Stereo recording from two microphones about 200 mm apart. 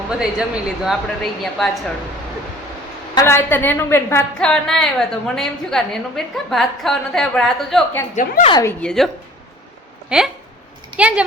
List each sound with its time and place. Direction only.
0.1 s a woman's voice: 5° right (ahead or behind)
3.2 s a woman's voice: 10° left (ahead or behind)
8.1 s a woman's voice: 35° left (ahead or behind)
8.8 s a woman's voice: 5° left (ahead or behind)
10.1 s a woman's voice: 5° right (ahead or behind)